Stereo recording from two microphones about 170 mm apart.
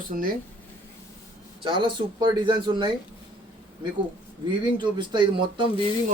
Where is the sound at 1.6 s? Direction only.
30° right (ahead or behind).